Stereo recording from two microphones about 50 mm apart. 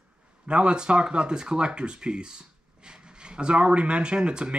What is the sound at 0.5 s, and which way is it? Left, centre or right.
Speech, right.